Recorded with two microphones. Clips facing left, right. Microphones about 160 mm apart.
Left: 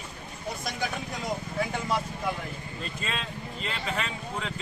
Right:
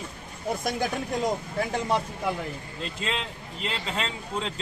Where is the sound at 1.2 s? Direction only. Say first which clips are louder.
Right 3 dB; 35° right (ahead or behind).